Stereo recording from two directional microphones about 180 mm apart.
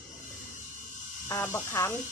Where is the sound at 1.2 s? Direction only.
15° left (ahead or behind).